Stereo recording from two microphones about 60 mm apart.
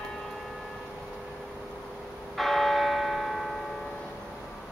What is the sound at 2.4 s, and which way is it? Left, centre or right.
Church bell, centre.